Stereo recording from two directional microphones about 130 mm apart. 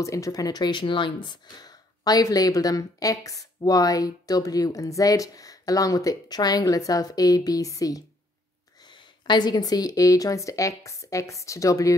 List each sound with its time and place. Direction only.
0.0 s speech: 25° left (ahead or behind)
8.8 s speech: 35° left (ahead or behind)